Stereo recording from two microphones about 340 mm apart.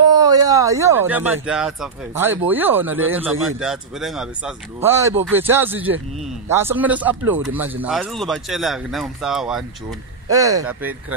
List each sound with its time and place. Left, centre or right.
0.0 s a man's voice: centre